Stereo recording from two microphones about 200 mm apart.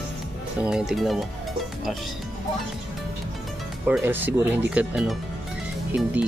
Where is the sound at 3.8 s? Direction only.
10° right (ahead or behind).